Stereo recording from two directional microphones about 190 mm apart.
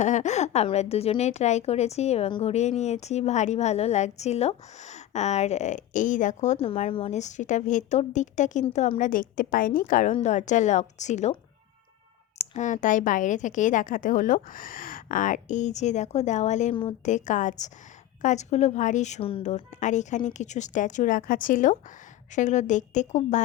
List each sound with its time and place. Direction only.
0.0 s a woman's voice: 40° left (ahead or behind)
12.5 s a woman's voice: 40° left (ahead or behind)